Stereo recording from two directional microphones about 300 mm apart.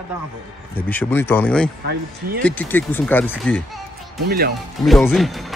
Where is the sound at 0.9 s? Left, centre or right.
Centre.